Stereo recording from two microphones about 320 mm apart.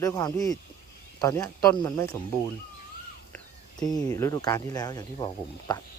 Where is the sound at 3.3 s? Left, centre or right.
Centre.